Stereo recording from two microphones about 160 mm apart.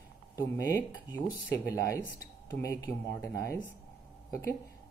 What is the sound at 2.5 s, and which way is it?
Speech, 20° left (ahead or behind).